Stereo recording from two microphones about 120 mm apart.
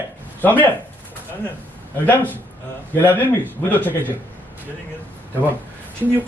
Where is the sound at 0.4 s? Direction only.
15° left (ahead or behind).